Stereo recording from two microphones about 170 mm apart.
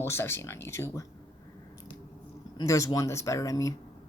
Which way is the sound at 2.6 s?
20° left (ahead or behind).